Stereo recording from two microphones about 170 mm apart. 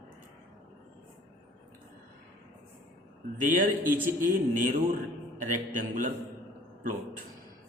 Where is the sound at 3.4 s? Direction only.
50° right (ahead or behind).